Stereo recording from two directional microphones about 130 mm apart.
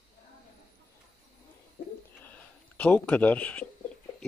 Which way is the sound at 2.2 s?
10° left (ahead or behind).